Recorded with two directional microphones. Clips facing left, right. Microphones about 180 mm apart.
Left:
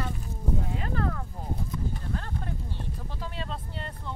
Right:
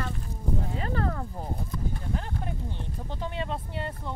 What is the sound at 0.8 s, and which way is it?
Speech, 40° right (ahead or behind).